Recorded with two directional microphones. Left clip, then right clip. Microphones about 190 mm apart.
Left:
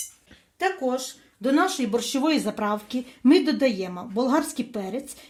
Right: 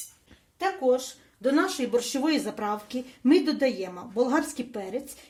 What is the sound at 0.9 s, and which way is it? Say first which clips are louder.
A woman's voice: right 1 dB; 45° left (ahead or behind).